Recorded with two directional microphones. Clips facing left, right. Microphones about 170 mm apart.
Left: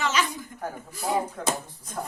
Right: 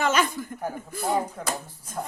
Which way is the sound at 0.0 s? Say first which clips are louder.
Right 3 dB; 50° right (ahead or behind).